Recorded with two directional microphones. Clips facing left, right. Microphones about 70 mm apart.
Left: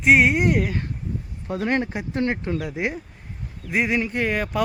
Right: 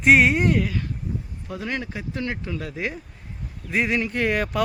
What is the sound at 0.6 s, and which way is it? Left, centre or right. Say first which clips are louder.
Speech: left 1 dB; left.